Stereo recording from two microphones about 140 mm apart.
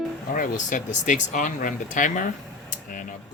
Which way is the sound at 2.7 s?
65° left (ahead or behind).